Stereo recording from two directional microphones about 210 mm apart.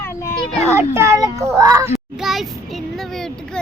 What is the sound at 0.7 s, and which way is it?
A child's voice, 10° right (ahead or behind).